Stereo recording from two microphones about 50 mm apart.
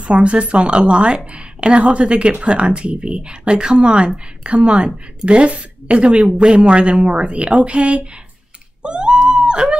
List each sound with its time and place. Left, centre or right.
0.0 s a woman's voice: right
8.8 s wail: right